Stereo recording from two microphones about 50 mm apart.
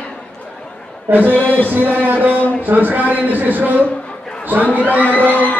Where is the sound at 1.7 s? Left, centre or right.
Right.